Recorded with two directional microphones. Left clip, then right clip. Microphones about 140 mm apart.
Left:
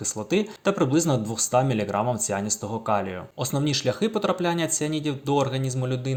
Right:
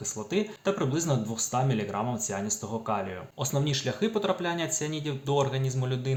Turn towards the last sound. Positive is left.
turn(degrees=35)  # may be behind; listen again after turning